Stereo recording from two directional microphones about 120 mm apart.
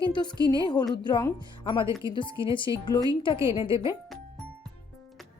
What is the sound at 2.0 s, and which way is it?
A woman's voice, 40° left (ahead or behind).